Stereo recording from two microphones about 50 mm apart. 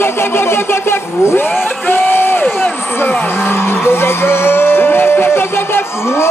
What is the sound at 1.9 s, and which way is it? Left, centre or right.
Crowd, left.